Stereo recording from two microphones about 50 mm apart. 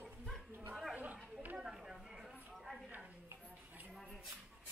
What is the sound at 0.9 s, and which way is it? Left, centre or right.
Chatter, right.